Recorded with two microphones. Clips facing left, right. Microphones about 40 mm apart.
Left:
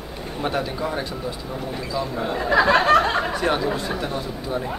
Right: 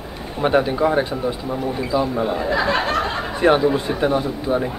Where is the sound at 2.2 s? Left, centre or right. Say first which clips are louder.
Right 3 dB; centre.